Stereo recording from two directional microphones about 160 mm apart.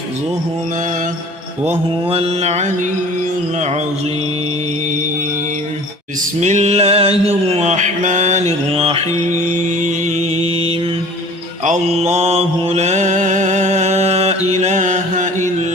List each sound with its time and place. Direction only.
1.6 s mantra: 35° right (ahead or behind)
6.4 s music: 45° right (ahead or behind)
8.7 s mantra: 35° right (ahead or behind)
9.5 s music: 50° right (ahead or behind)
10.3 s mantra: 35° right (ahead or behind)
11.6 s mantra: 45° right (ahead or behind)